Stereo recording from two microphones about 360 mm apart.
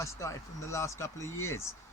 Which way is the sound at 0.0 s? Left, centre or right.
Centre.